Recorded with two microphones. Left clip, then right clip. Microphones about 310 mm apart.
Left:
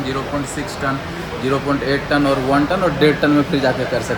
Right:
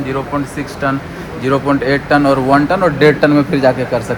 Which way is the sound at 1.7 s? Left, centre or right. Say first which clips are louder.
Right 7 dB; right.